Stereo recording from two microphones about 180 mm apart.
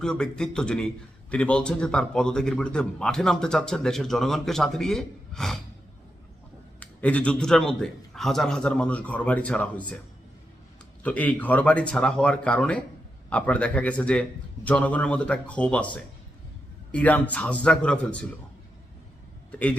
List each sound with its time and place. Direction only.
0.0 s a man's voice: 5° left (ahead or behind)
6.7 s a man's voice: 5° left (ahead or behind)
11.0 s a man's voice: 10° left (ahead or behind)
19.5 s a man's voice: 10° left (ahead or behind)